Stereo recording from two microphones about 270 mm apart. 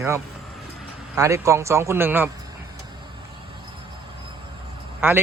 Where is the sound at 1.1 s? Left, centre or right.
Centre.